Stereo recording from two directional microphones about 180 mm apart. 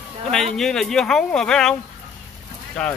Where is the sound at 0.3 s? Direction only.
Centre (ahead or behind).